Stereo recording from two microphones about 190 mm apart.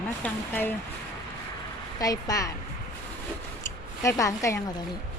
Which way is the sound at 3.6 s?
15° left (ahead or behind).